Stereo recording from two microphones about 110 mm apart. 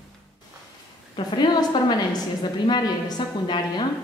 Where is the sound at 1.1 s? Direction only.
45° left (ahead or behind).